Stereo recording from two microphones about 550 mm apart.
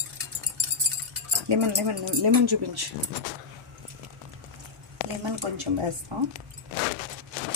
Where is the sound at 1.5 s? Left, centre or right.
Right.